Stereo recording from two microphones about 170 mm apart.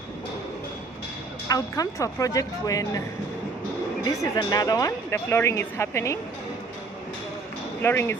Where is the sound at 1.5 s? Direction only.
20° left (ahead or behind).